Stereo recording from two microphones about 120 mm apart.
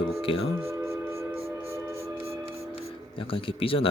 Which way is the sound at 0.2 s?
50° left (ahead or behind).